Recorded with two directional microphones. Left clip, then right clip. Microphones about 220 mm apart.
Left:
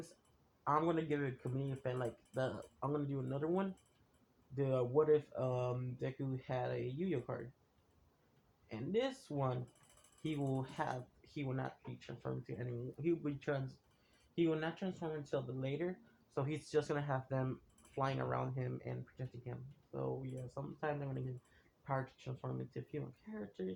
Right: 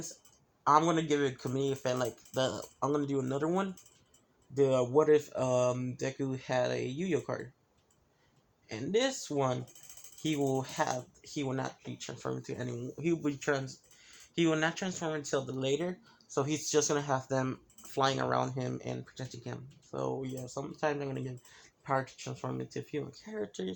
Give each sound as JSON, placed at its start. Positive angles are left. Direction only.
{"t": 0.7, "sound": "speech", "side_deg": -40}
{"t": 9.0, "sound": "speech", "side_deg": -45}
{"t": 16.3, "sound": "speech", "side_deg": -50}
{"t": 22.2, "sound": "speech", "side_deg": -45}